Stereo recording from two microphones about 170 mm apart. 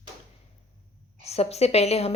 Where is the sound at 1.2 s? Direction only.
40° left (ahead or behind).